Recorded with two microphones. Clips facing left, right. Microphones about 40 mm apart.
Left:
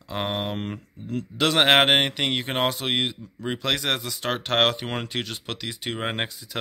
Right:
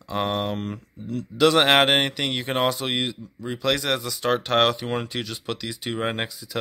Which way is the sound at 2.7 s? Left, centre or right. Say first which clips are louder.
Even; left.